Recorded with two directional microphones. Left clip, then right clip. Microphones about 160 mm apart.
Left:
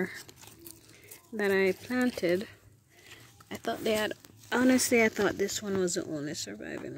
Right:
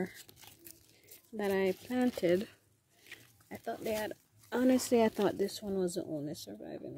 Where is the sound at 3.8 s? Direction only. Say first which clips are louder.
Left 7 dB; 15° left (ahead or behind).